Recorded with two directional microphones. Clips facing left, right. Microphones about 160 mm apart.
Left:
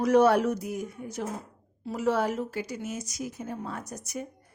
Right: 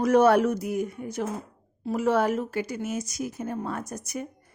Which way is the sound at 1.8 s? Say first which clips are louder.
Right 3 dB; 50° right (ahead or behind).